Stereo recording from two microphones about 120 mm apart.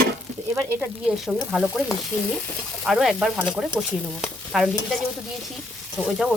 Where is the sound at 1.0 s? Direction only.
5° right (ahead or behind).